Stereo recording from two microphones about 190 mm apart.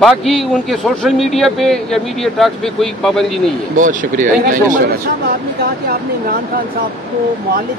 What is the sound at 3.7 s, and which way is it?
Speech, 45° right (ahead or behind).